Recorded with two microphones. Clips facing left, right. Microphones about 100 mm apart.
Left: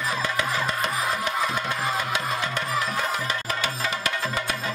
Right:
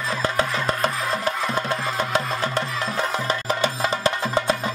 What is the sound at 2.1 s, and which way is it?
Music, 35° right (ahead or behind).